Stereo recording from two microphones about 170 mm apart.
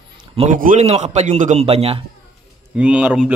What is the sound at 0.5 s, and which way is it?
A man's voice, 50° right (ahead or behind).